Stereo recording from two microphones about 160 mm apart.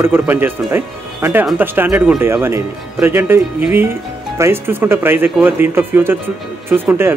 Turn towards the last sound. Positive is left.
turn(degrees=-15)  # may be behind; listen again after turning